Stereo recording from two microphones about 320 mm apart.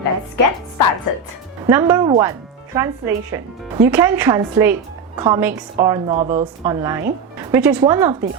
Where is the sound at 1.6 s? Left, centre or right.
Centre.